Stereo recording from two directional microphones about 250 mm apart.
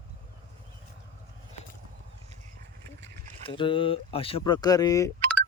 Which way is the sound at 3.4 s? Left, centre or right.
Centre.